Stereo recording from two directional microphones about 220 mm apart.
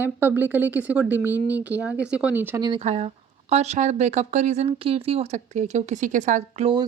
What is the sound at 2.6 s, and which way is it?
Speech, 25° right (ahead or behind).